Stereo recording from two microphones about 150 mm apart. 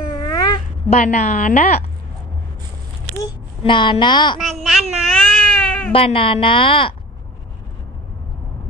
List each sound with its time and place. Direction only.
0.1 s cat: 25° left (ahead or behind)
0.8 s a woman's voice: 50° left (ahead or behind)
3.3 s a woman's voice: 35° left (ahead or behind)
4.4 s baby cry: centre (ahead or behind)
5.9 s a woman's voice: 40° left (ahead or behind)